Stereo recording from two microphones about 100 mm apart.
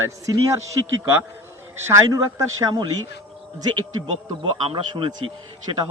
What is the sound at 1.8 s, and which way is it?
Speech, 30° right (ahead or behind).